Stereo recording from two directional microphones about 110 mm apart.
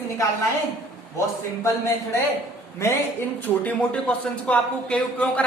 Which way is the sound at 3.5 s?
10° left (ahead or behind).